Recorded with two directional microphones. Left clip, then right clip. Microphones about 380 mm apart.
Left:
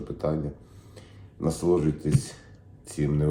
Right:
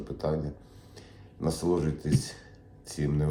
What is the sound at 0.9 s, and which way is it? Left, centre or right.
Speech, centre.